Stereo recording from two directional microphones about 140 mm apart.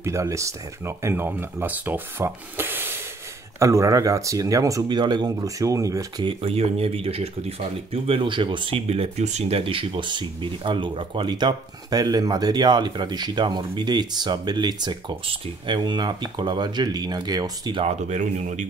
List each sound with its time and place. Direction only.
0.0 s speech: 20° right (ahead or behind)
6.2 s speech: 45° right (ahead or behind)
17.8 s speech: 60° right (ahead or behind)